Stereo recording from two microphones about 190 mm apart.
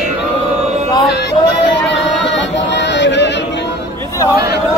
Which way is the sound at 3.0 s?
70° left (ahead or behind).